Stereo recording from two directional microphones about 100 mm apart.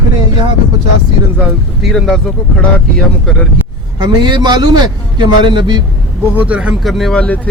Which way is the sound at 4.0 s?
45° right (ahead or behind).